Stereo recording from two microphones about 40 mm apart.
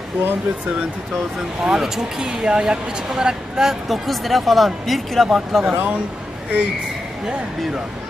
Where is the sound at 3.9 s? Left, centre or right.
Centre.